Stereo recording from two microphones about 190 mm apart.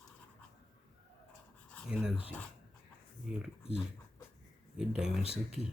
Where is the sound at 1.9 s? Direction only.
5° right (ahead or behind).